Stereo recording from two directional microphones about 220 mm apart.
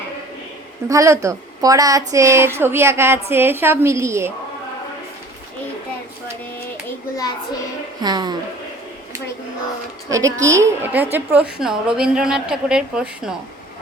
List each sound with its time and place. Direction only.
0.9 s a woman's voice: 15° right (ahead or behind)
8.0 s a woman's voice: 20° right (ahead or behind)
10.1 s a woman's voice: 15° right (ahead or behind)